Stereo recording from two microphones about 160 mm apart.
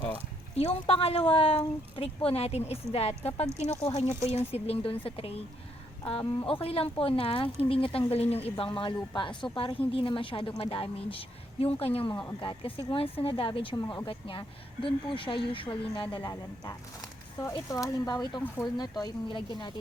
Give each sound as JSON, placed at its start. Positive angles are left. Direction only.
{"t": 0.5, "sound": "speech", "side_deg": 40}
{"t": 16.2, "sound": "speech", "side_deg": 20}